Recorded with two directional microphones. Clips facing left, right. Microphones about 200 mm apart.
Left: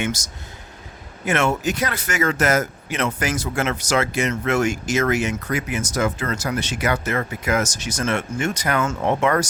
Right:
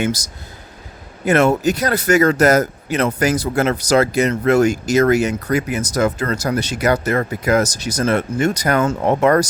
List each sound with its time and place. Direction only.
0.0 s speech: 35° right (ahead or behind)